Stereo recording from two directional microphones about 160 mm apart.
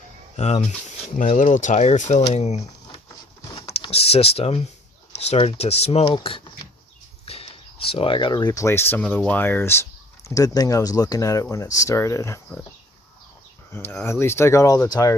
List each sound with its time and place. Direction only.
0.3 s speech: 45° left (ahead or behind)
3.5 s power windows: 35° left (ahead or behind)
5.1 s speech: 40° left (ahead or behind); by 12.4 s 15° left (ahead or behind)
13.7 s speech: 15° left (ahead or behind)